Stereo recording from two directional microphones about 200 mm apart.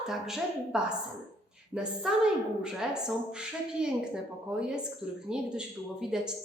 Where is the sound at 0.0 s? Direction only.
Centre (ahead or behind).